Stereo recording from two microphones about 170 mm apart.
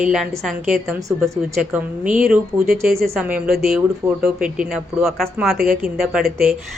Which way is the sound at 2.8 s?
60° right (ahead or behind).